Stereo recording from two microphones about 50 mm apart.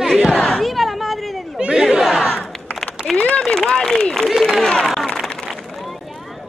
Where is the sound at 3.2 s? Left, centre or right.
Left; by 4.7 s centre.